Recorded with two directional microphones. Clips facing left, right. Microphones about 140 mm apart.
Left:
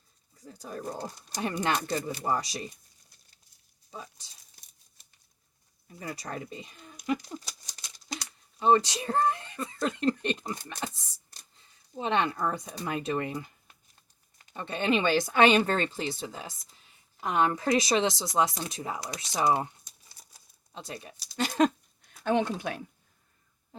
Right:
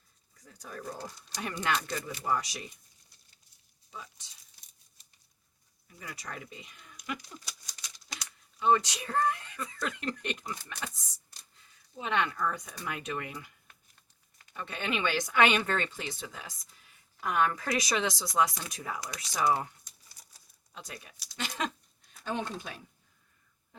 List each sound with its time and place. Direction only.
0.3 s speech: 30° left (ahead or behind)
3.9 s speech: 35° left (ahead or behind)
5.9 s speech: 35° left (ahead or behind)
11.9 s speech: 30° left (ahead or behind)
22.2 s speech: 70° left (ahead or behind)